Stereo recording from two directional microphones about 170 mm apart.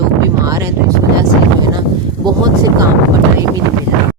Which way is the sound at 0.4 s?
20° right (ahead or behind).